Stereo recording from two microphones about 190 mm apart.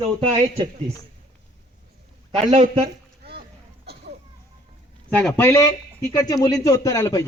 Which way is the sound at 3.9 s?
60° right (ahead or behind).